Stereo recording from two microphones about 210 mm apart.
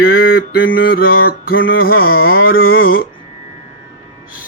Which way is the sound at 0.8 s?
45° left (ahead or behind).